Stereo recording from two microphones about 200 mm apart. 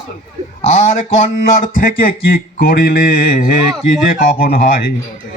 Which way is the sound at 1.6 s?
45° left (ahead or behind).